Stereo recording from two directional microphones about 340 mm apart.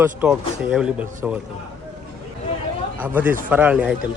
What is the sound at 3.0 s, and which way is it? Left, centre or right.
Speech, centre.